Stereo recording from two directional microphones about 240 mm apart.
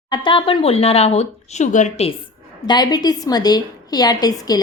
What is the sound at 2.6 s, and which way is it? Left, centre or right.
A woman's voice, centre.